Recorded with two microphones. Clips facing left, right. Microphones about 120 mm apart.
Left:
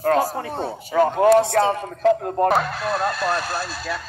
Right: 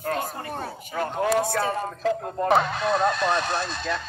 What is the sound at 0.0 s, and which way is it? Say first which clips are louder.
Speech: left 9 dB; 90° left.